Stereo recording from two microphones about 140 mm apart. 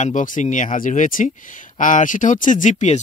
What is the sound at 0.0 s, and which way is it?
Speech, 70° left (ahead or behind).